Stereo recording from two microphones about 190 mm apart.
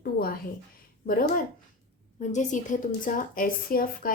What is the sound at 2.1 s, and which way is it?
Speech, 40° left (ahead or behind).